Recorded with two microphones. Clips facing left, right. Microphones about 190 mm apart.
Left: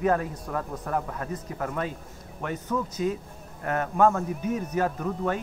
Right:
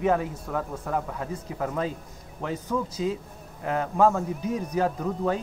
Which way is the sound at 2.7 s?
10° right (ahead or behind).